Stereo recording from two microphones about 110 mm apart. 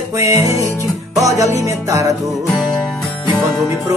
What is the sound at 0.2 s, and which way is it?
Music, 25° right (ahead or behind).